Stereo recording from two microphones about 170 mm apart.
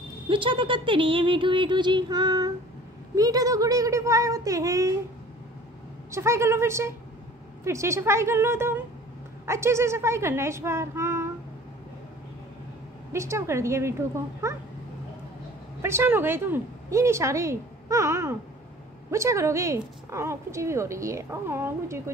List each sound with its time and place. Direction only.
0.3 s a sound: 30° right (ahead or behind)
6.1 s a woman's voice: 15° right (ahead or behind)
13.1 s a woman's voice: 15° right (ahead or behind)
15.8 s a woman's voice: 15° right (ahead or behind)